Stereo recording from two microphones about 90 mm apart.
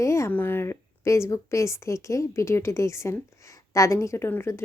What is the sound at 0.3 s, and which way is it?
Speech, 20° left (ahead or behind).